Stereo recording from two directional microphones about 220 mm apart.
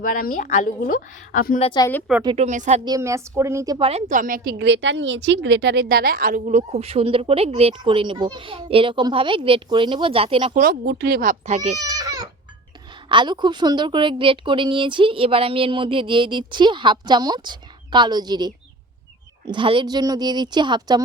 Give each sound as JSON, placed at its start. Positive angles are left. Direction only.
{"t": 0.0, "sound": "a woman's voice", "side_deg": 40}
{"t": 1.6, "sound": "speech", "side_deg": 20}
{"t": 2.2, "sound": "speech", "side_deg": -30}
{"t": 2.8, "sound": "a woman's voice", "side_deg": -15}
{"t": 4.5, "sound": "a woman's voice", "side_deg": -55}
{"t": 10.6, "sound": "speech", "side_deg": -45}
{"t": 11.8, "sound": "baby cry", "side_deg": -15}
{"t": 13.1, "sound": "a woman's voice", "side_deg": -20}